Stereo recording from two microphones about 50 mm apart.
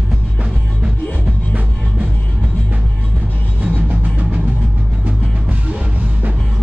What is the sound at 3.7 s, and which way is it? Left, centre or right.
Music, right.